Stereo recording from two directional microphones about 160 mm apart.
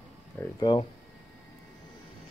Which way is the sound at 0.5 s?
30° left (ahead or behind).